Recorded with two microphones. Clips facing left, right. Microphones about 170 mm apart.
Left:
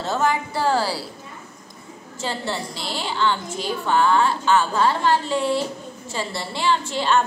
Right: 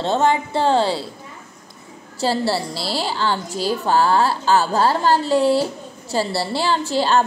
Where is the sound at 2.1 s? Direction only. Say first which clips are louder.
Right 7 dB; 35° right (ahead or behind).